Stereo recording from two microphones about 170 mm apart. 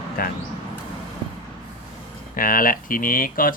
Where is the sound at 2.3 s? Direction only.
55° left (ahead or behind).